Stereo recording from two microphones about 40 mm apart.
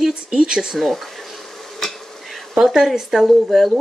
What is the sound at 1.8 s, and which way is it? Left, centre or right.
Insect, centre.